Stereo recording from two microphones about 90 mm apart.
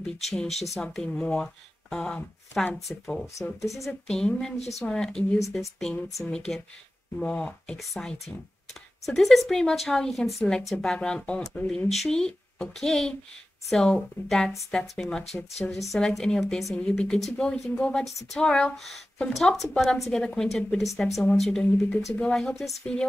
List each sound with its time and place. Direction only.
0.0 s a woman's voice: 5° left (ahead or behind)
7.7 s a woman's voice: centre (ahead or behind)